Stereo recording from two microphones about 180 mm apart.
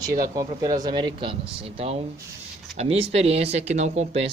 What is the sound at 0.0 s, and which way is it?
Speech, 20° right (ahead or behind).